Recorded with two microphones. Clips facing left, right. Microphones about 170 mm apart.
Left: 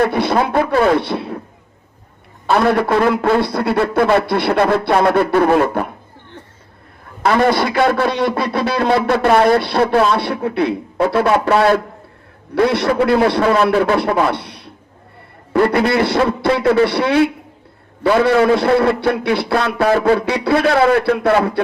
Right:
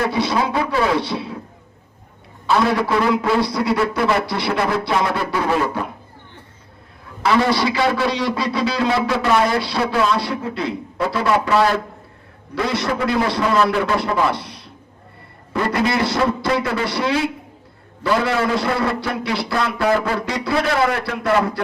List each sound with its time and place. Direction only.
0.0 s a man's voice: 55° left (ahead or behind)
2.5 s a man's voice: 55° left (ahead or behind)
7.2 s a man's voice: 50° left (ahead or behind)